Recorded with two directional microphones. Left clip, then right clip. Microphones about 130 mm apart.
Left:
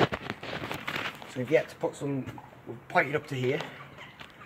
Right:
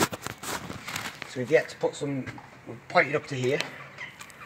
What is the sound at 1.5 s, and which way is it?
Cutlery, 40° right (ahead or behind).